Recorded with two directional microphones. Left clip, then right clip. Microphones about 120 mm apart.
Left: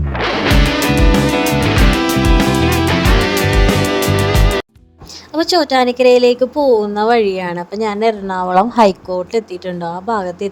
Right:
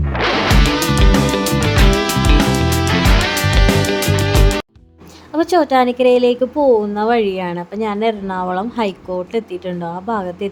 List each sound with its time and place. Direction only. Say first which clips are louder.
0.1 s music: even; centre (ahead or behind)
5.3 s speech: even; 50° left (ahead or behind)
6.6 s speech: right 1 dB; 5° left (ahead or behind)
6.9 s a woman's voice: left 3 dB; 45° left (ahead or behind)